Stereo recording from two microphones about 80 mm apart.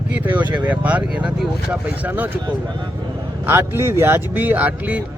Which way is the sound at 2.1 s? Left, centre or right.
Right.